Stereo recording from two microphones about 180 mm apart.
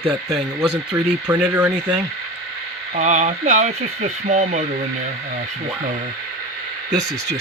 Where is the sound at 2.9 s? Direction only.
40° right (ahead or behind).